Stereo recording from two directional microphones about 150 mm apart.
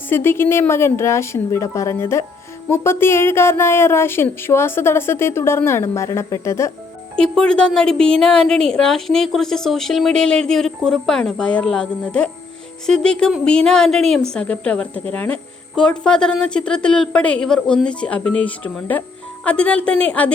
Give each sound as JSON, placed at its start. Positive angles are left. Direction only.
{"t": 0.1, "sound": "speech", "side_deg": 15}
{"t": 7.2, "sound": "a woman's voice", "side_deg": 5}